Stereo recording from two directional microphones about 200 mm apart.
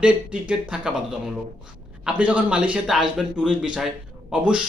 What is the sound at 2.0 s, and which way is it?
A man's voice, 5° right (ahead or behind).